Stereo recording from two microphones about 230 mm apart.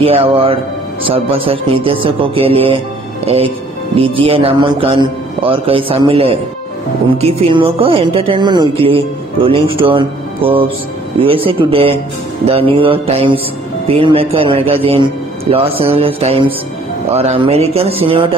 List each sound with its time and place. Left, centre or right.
0.0 s a woman's voice: right